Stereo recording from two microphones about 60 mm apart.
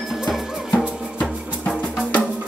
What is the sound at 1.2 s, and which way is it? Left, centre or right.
Music, left.